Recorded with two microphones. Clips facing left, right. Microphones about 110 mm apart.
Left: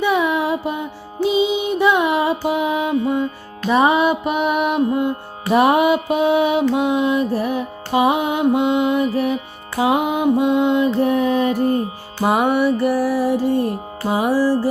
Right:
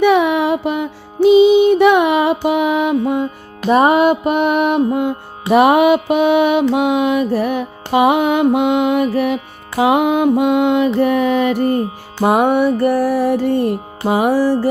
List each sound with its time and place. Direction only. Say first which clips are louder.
0.0 s music: right 5 dB; 70° right (ahead or behind)
3.7 s music: right 4 dB; 45° right (ahead or behind); by 11.8 s 80° right
12.2 s music: right 3 dB; 50° right (ahead or behind)